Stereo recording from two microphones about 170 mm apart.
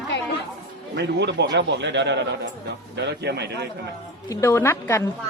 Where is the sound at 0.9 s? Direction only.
85° right.